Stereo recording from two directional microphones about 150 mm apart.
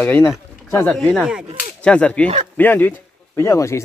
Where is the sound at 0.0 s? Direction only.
15° left (ahead or behind).